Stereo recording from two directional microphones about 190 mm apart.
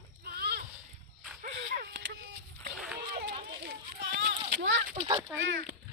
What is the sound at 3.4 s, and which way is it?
Children playing, 65° right (ahead or behind).